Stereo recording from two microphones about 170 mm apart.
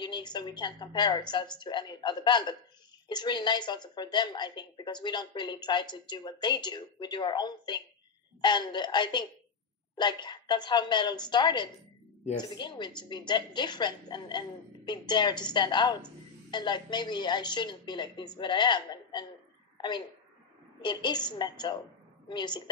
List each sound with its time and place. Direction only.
0.0 s a woman's voice: 25° left (ahead or behind)
20.8 s a woman's voice: 25° left (ahead or behind)